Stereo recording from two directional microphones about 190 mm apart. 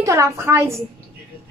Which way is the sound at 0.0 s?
15° right (ahead or behind).